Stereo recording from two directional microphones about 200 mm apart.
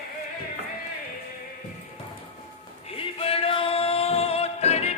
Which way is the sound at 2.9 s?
30° left (ahead or behind).